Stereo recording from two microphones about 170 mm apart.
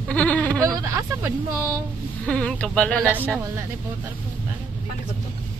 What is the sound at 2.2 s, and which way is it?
Speech, 5° left (ahead or behind).